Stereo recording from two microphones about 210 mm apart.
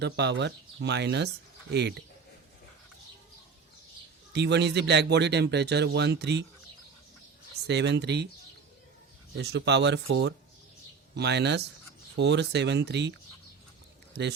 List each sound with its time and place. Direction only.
0.0 s speech: 55° right (ahead or behind)
4.3 s speech: 55° right (ahead or behind)
7.7 s speech: 55° right (ahead or behind)
9.4 s speech: 55° right (ahead or behind)